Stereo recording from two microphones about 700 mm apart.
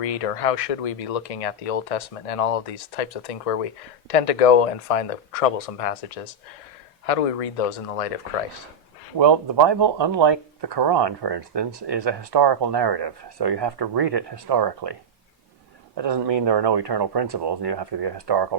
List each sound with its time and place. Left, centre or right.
0.0 s speech: left
9.1 s speech: right
16.0 s speech: right